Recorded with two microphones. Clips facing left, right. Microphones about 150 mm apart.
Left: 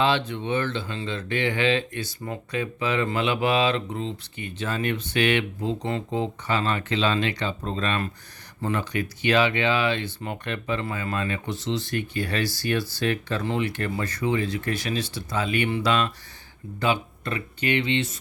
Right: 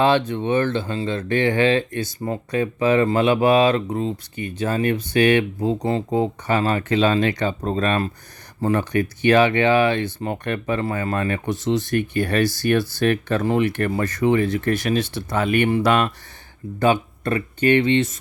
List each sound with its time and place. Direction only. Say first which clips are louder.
0.0 s speech: right 5 dB; 45° right (ahead or behind)